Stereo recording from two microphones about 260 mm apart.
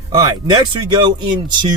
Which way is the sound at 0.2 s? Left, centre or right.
Centre.